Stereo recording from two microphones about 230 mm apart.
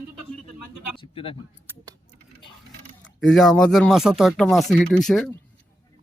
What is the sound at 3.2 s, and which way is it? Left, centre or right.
Speech, centre.